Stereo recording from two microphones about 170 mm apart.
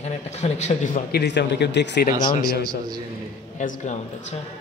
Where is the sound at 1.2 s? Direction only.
85° left.